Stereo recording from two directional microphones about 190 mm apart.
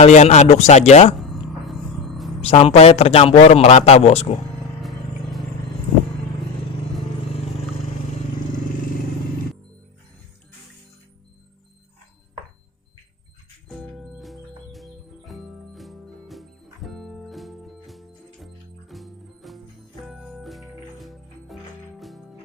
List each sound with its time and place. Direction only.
0.0 s a man's voice: 35° left (ahead or behind)
1.2 s music: centre (ahead or behind)
2.4 s a man's voice: 30° left (ahead or behind)
4.8 s vehicle: centre (ahead or behind)
13.7 s music: centre (ahead or behind)